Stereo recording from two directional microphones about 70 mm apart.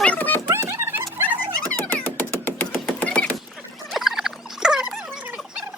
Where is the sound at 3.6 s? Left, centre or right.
Centre.